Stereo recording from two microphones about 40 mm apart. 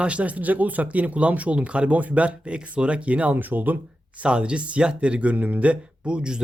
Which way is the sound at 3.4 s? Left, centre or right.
Right.